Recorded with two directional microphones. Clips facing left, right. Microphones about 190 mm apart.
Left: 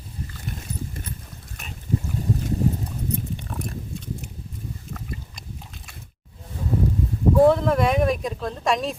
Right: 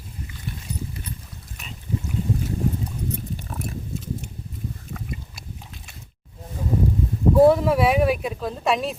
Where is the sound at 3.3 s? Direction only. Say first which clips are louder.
Even; 5° right (ahead or behind).